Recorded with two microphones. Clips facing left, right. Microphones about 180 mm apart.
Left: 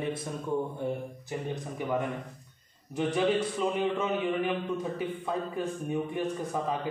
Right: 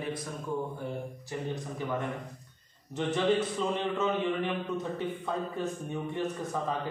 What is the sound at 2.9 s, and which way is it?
A man's voice, 10° left (ahead or behind).